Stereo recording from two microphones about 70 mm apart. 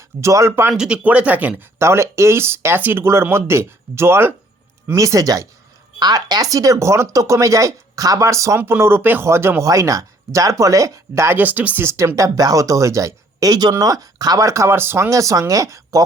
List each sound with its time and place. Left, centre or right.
0.2 s speech: right
0.7 s speech: centre
1.0 s speech: right
1.8 s speech: right
4.9 s speech: right
6.0 s speech: right
9.6 s speech: right
11.3 s speech: right
11.9 s speech: right
13.5 s speech: right
14.4 s speech: right
14.7 s speech: right
15.1 s speech: right